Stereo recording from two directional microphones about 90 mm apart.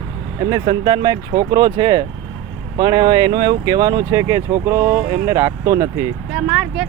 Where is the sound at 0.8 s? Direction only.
55° right (ahead or behind); by 6.1 s 30° right (ahead or behind).